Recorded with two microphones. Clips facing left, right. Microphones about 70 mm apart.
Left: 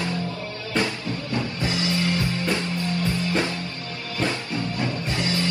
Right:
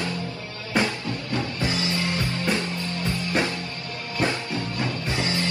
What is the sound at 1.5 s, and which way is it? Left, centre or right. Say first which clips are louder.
Music: left 1 dB; right.